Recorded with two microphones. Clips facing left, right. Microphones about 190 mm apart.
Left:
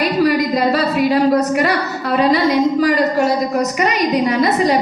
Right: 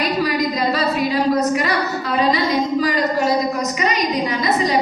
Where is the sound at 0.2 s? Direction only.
55° left (ahead or behind).